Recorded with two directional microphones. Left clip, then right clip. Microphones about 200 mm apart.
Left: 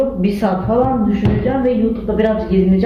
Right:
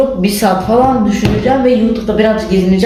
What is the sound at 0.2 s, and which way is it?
A man's voice, centre (ahead or behind).